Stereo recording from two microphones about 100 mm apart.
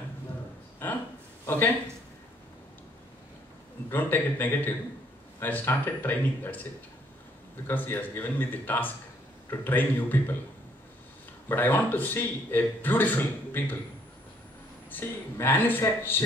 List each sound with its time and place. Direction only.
1.4 s a sound: 20° left (ahead or behind)
3.9 s a man's voice: 20° left (ahead or behind)
7.6 s a man's voice: 20° left (ahead or behind)
11.4 s a man's voice: 20° left (ahead or behind)
14.9 s a man's voice: 20° left (ahead or behind)